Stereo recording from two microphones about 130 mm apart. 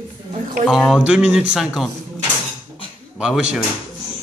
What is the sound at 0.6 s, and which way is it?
Speech, centre (ahead or behind).